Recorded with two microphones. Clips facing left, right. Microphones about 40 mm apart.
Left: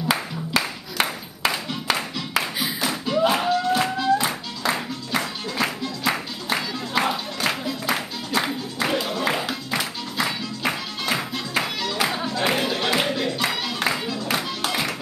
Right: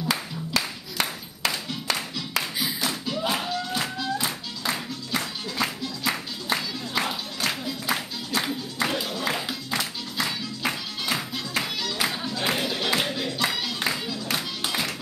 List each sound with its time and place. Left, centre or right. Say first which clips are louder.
0.1 s clapping: left 5 dB; left
7.8 s music: left 3 dB; centre